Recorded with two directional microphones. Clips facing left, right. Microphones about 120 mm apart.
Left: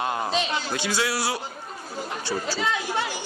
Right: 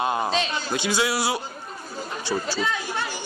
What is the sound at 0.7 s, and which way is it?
A man's voice, 20° right (ahead or behind).